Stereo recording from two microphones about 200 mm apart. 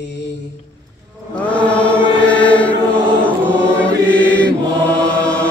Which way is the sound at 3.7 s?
5° left (ahead or behind).